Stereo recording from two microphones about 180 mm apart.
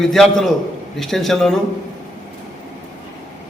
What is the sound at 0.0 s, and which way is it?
A man's voice, centre (ahead or behind).